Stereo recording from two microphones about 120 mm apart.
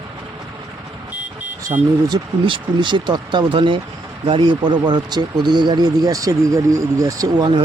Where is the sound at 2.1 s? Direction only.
40° right (ahead or behind).